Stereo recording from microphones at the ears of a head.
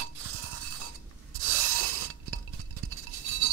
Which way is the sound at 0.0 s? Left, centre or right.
Right.